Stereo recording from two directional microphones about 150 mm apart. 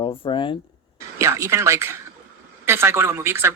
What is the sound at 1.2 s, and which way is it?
A man's voice, 20° right (ahead or behind).